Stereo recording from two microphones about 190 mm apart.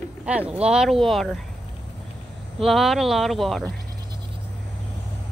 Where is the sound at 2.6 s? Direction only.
Centre (ahead or behind).